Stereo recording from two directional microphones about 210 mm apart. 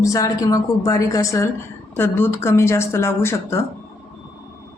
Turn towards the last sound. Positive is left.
turn(degrees=10)  # may be behind; listen again after turning